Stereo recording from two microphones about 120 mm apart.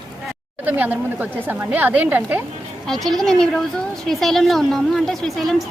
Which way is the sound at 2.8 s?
5° left (ahead or behind).